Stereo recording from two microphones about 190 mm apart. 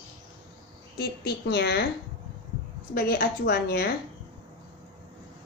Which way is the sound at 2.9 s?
55° left (ahead or behind).